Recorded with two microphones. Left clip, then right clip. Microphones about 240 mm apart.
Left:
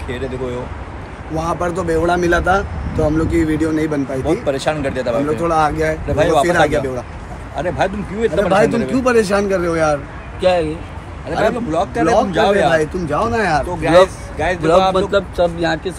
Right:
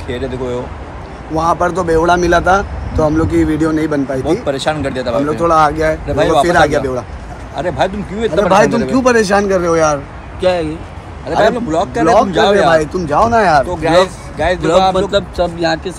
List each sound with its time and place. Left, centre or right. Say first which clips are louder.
1.3 s speech: right 6 dB; centre
8.9 s speech: right 5 dB; right
10.4 s speech: right 1 dB; centre; by 13.7 s right
13.7 s speech: even; centre